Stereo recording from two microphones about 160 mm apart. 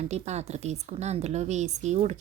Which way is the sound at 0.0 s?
45° right (ahead or behind).